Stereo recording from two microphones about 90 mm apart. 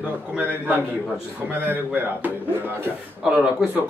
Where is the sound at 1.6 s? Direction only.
20° right (ahead or behind).